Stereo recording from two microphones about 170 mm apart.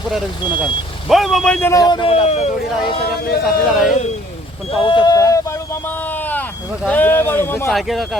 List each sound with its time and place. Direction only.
1.0 s speech: centre (ahead or behind)
1.7 s speech: 25° left (ahead or behind)
3.4 s speech: centre (ahead or behind)
4.8 s speech: 30° left (ahead or behind)
6.8 s speech: 10° left (ahead or behind)
7.7 s speech: centre (ahead or behind)